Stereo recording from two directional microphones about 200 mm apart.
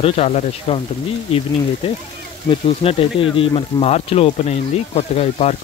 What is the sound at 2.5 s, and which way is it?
Speech, 30° left (ahead or behind).